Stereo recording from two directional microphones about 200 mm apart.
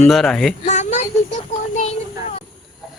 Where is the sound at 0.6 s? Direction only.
35° left (ahead or behind).